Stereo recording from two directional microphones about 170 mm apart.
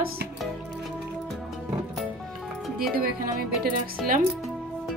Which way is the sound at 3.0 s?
65° right (ahead or behind).